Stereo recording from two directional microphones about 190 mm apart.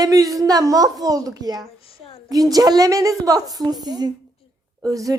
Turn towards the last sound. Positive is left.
turn(degrees=-20)  # may be behind; listen again after turning